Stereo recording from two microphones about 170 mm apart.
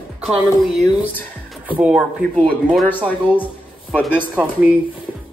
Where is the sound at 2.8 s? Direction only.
10° left (ahead or behind).